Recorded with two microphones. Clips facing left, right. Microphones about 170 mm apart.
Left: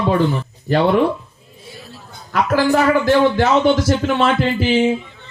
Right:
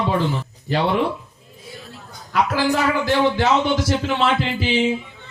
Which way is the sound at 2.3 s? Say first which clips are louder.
Left 4 dB; 55° left (ahead or behind).